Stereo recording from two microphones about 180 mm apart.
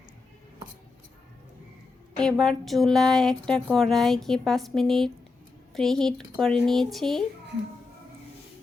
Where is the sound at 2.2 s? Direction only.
Centre (ahead or behind).